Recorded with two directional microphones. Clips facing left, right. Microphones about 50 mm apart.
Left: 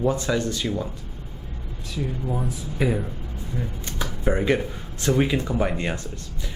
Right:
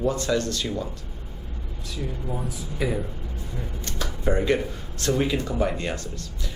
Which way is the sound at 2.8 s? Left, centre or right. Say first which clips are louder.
Left 3 dB; left.